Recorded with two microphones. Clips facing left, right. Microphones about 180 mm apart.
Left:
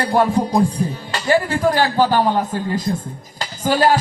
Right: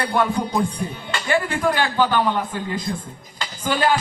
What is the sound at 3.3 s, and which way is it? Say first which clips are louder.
Music: left 5 dB; 40° left (ahead or behind).